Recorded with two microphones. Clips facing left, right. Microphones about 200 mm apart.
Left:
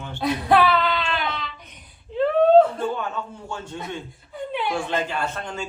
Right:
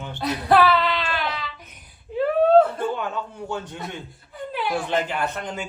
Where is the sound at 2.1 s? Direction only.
5° right (ahead or behind).